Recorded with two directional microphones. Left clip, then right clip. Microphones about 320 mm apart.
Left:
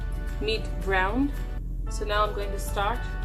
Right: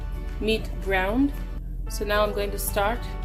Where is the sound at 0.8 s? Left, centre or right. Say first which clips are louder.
Right 1 dB; right.